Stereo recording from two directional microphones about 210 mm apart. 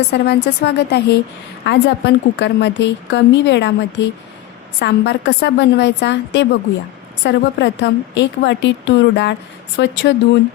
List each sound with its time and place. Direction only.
0.1 s a woman's voice: 55° left (ahead or behind)